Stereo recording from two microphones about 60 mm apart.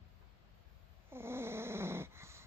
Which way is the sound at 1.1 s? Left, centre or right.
Right.